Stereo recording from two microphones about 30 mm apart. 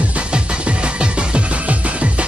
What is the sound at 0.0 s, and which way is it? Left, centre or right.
Music, right.